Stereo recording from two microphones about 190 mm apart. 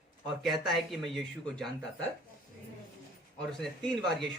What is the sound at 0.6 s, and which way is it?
Speech, centre (ahead or behind).